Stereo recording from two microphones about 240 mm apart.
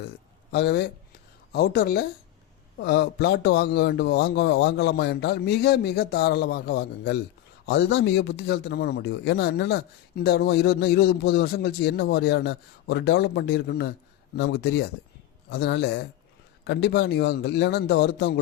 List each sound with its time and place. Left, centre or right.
0.5 s a man's voice: left